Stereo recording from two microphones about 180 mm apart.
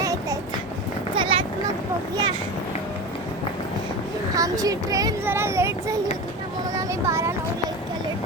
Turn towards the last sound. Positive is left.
turn(degrees=-15)  # may be behind; listen again after turning